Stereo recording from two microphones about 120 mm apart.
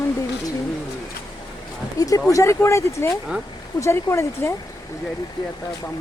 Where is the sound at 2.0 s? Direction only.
30° left (ahead or behind).